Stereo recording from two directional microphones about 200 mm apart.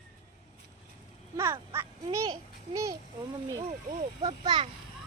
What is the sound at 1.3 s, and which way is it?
Quack, 15° right (ahead or behind).